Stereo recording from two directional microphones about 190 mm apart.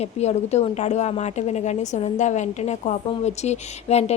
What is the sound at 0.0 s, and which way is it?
A woman's voice, 35° left (ahead or behind).